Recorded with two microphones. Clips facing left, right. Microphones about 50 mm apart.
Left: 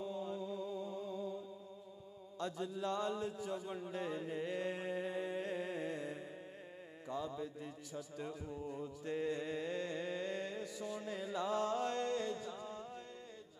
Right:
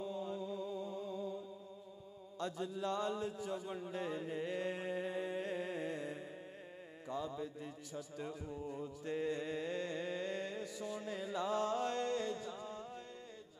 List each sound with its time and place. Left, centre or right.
0.0 s music: right
2.4 s a sound: right
7.1 s mantra: right
8.2 s music: right